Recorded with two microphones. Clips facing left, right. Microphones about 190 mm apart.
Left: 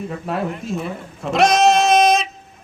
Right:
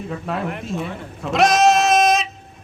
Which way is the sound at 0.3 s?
Centre (ahead or behind).